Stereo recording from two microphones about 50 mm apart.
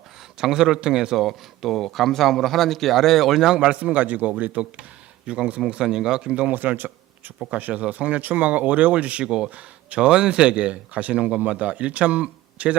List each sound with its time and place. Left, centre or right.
0.3 s speech: centre
1.1 s speech: centre
3.5 s speech: centre
5.2 s speech: centre
6.3 s speech: right
7.5 s speech: right